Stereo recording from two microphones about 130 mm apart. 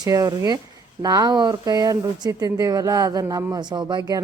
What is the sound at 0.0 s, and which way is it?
Speech, 30° right (ahead or behind).